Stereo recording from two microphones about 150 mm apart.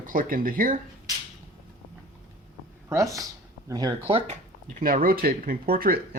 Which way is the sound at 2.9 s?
20° right (ahead or behind).